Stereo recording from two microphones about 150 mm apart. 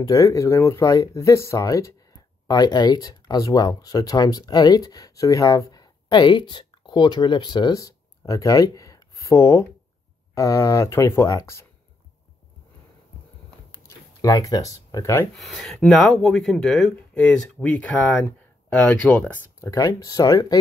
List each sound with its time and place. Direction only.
0.0 s speech: 20° left (ahead or behind)
13.7 s a sound: 20° left (ahead or behind)
15.3 s speech: centre (ahead or behind); by 20.5 s 25° left (ahead or behind)